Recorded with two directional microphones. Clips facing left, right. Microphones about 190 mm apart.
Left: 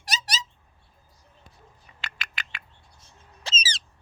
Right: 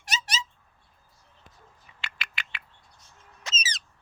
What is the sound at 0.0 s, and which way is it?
Cat, 35° left (ahead or behind).